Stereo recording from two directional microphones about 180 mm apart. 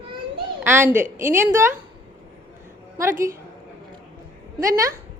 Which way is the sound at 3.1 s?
50° right (ahead or behind).